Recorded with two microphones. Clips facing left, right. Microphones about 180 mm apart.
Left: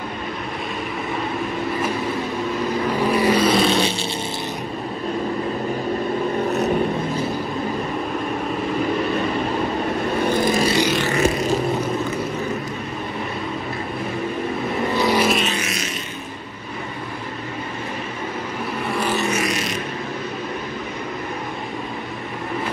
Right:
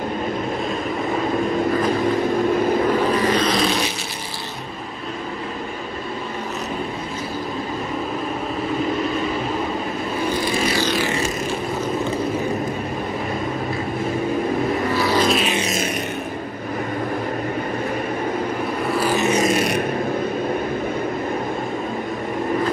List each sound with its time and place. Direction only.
3.1 s vehicle: 10° left (ahead or behind)
3.6 s a sound: 25° left (ahead or behind)
10.4 s vehicle: 40° left (ahead or behind)
15.0 s vehicle: 15° left (ahead or behind)
18.9 s vehicle: 10° right (ahead or behind)
19.4 s vehicle: 55° right (ahead or behind)